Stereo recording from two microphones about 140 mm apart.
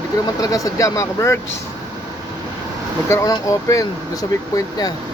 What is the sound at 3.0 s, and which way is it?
Speech, 25° left (ahead or behind).